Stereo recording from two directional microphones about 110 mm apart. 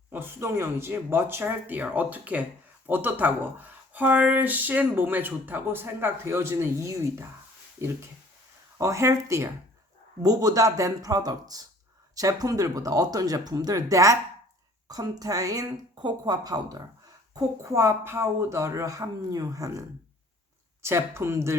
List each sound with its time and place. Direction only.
0.1 s speech: 20° right (ahead or behind)
8.8 s speech: 25° right (ahead or behind)
20.8 s speech: 25° right (ahead or behind)